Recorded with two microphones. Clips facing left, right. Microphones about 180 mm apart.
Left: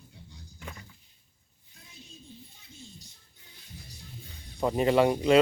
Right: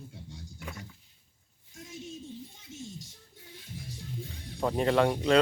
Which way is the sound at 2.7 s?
90° right.